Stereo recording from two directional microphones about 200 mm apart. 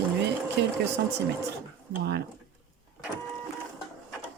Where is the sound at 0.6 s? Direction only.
55° right (ahead or behind).